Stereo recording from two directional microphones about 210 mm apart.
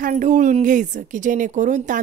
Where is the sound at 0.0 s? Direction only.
35° right (ahead or behind).